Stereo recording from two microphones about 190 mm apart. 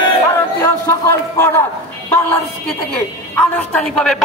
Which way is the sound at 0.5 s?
15° left (ahead or behind).